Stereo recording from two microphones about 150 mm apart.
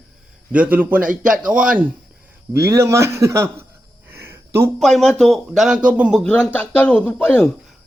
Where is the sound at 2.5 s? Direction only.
20° right (ahead or behind).